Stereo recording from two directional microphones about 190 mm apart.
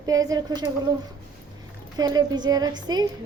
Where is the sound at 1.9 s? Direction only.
20° right (ahead or behind).